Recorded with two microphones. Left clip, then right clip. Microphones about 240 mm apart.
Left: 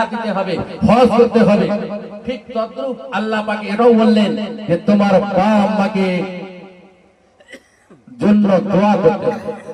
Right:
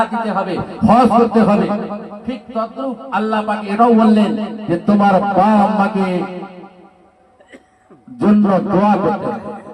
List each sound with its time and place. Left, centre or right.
0.0 s a man's voice: left
8.2 s a man's voice: left